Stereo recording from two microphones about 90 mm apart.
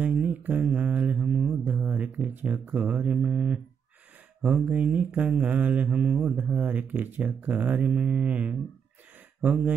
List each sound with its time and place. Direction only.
0.0 s mantra: 15° right (ahead or behind)
4.6 s mantra: 15° right (ahead or behind)
6.3 s speech: 20° right (ahead or behind)
9.4 s mantra: 15° right (ahead or behind)